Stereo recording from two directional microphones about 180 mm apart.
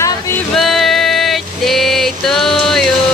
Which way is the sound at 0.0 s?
15° left (ahead or behind).